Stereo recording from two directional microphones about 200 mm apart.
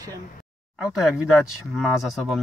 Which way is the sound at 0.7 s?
5° right (ahead or behind).